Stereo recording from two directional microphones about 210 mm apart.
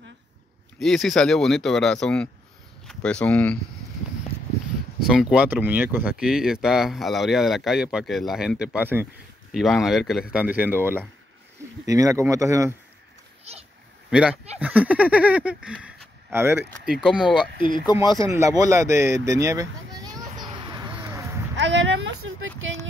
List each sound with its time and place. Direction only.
0.7 s speech: centre (ahead or behind)
5.0 s speech: 5° right (ahead or behind)
14.1 s speech: 5° right (ahead or behind)
17.9 s speech: 20° left (ahead or behind)
18.2 s a sound: 15° right (ahead or behind)
21.5 s a sound: 60° right (ahead or behind)